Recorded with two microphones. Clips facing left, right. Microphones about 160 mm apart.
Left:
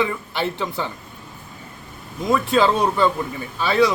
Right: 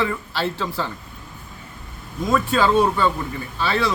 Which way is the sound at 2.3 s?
15° left (ahead or behind).